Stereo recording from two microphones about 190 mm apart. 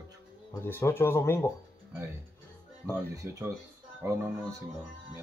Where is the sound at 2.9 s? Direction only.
15° right (ahead or behind).